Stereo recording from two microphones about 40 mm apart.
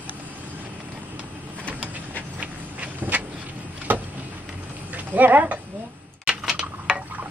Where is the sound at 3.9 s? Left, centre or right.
Right.